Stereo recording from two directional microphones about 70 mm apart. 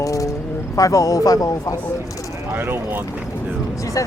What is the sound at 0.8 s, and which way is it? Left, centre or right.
Speech, left.